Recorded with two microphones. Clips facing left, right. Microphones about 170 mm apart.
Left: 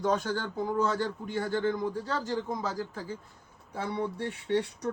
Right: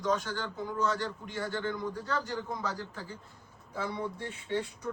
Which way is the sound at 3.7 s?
60° left (ahead or behind).